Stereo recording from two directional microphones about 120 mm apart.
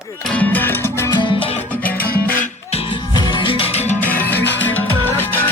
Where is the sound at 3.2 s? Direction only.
40° left (ahead or behind); by 3.9 s 60° left (ahead or behind).